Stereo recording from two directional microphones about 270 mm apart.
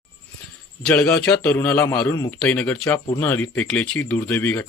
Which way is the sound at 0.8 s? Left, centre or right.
Centre.